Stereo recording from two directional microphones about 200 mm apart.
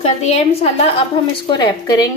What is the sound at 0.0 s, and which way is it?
Speech, 30° left (ahead or behind).